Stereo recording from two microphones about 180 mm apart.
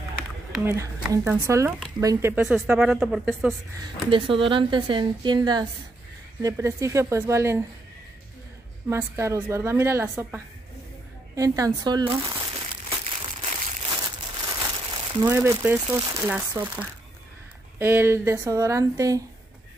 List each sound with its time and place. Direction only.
0.7 s a woman's voice: 15° right (ahead or behind); by 3.5 s centre (ahead or behind)
3.8 s a woman's voice: 30° right (ahead or behind)
8.8 s a woman's voice: 15° right (ahead or behind)
11.3 s speech: 20° right (ahead or behind)
12.9 s crumpling: 30° right (ahead or behind)
13.8 s crumpling: 25° right (ahead or behind)
15.2 s a woman's voice: 15° right (ahead or behind)